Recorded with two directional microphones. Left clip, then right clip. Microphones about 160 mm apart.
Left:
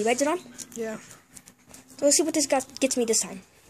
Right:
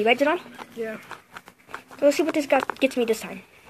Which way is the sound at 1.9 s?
20° left (ahead or behind).